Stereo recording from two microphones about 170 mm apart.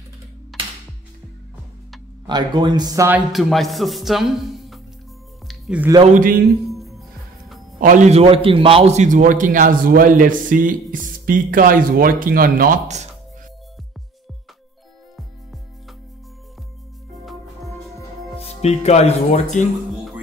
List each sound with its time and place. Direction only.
0.5 s music: centre (ahead or behind)
2.2 s speech: 25° right (ahead or behind)
3.1 s speech: centre (ahead or behind)
5.5 s music: 5° right (ahead or behind)
6.0 s a man's voice: 50° right (ahead or behind)
6.7 s music: centre (ahead or behind)
7.8 s a man's voice: 50° right (ahead or behind)
18.4 s speech: 40° left (ahead or behind)